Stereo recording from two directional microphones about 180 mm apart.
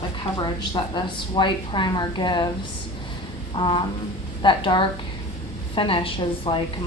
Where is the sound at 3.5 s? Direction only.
25° left (ahead or behind).